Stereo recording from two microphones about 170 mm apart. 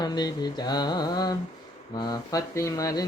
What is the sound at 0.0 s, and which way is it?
Speech, 25° left (ahead or behind).